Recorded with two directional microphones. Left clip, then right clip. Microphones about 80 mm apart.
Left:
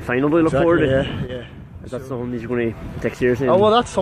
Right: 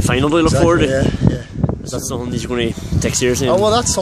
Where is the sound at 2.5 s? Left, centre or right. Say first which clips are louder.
Right 2 dB; right.